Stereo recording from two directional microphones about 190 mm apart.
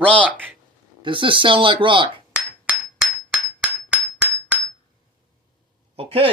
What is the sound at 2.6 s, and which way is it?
Hammer, 5° right (ahead or behind).